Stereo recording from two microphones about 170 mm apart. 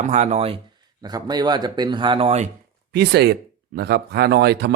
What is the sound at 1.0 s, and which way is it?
Speech, 25° right (ahead or behind).